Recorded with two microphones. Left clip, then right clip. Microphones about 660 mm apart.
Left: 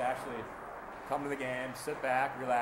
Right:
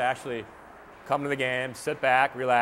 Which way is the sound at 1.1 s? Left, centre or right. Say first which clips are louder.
Right 9 dB; right.